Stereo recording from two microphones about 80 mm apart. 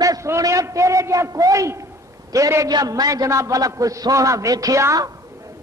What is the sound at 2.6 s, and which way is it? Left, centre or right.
A man's voice, right.